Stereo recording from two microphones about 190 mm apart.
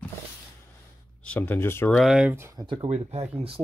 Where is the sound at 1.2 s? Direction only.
10° left (ahead or behind).